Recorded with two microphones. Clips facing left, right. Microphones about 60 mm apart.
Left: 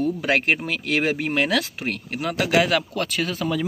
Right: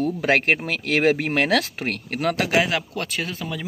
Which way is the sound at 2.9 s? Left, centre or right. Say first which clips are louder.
Left 3 dB; right.